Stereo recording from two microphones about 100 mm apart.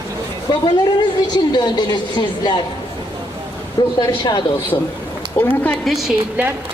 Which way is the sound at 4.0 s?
45° left (ahead or behind).